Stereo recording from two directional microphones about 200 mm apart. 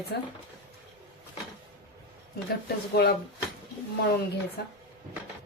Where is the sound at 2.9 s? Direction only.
55° left (ahead or behind).